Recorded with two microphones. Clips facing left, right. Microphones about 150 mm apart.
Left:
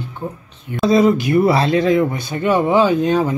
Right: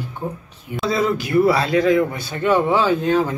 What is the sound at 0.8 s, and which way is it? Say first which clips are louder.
A man's voice: left 7 dB; 20° left (ahead or behind).